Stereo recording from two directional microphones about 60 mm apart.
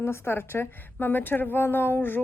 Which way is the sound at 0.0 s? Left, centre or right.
Left.